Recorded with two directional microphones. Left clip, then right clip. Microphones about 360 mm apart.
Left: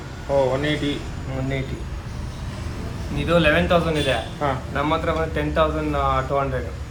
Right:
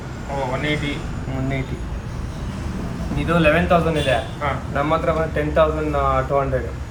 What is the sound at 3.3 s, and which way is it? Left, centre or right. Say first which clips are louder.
A man's voice: right 1 dB; centre.